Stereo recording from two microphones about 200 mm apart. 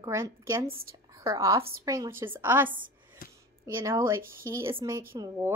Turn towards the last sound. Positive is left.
turn(degrees=-15)  # may be behind; listen again after turning